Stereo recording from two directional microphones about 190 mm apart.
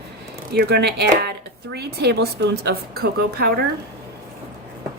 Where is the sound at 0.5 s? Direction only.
55° right (ahead or behind).